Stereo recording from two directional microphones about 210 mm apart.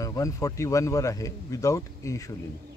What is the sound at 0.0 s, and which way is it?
Speech, 15° left (ahead or behind).